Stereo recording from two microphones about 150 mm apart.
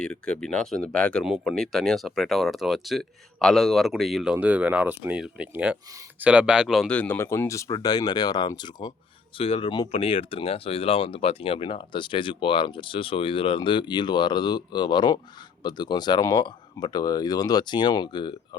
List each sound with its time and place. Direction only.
0.0 s speech: 5° left (ahead or behind); by 8.9 s 30° left (ahead or behind)
9.4 s speech: 40° left (ahead or behind)
9.9 s speech: 40° left (ahead or behind)